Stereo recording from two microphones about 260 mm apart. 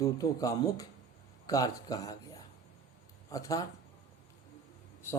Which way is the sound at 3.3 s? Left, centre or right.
Centre.